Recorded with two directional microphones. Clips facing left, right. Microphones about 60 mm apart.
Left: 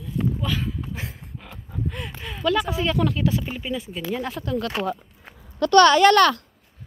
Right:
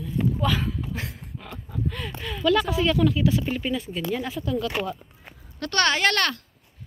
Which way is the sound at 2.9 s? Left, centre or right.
Left.